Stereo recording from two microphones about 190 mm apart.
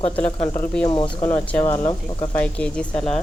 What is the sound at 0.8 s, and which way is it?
Speech, 25° left (ahead or behind).